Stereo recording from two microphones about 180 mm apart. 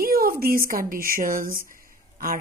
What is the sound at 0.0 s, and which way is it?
Speech, 55° right (ahead or behind).